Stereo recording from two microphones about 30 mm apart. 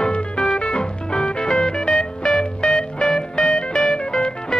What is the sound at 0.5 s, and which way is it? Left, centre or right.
Music, left.